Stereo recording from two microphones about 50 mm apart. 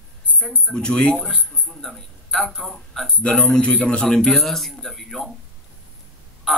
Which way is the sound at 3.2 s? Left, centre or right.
Left.